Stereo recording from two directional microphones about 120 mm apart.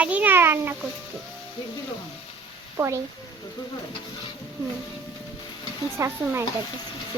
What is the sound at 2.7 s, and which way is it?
Speech, 25° right (ahead or behind).